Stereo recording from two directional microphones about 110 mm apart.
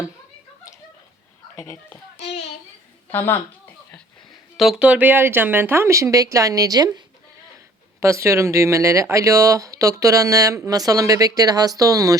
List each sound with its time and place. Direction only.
3.1 s a woman's voice: 20° left (ahead or behind)
4.5 s speech: 5° right (ahead or behind); by 7.0 s 35° right (ahead or behind)
8.0 s speech: 25° right (ahead or behind)